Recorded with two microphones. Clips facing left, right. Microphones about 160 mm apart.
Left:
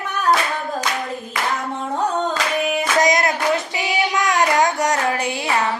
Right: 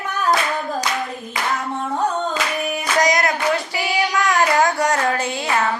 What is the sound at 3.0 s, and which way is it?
Music, 25° left (ahead or behind).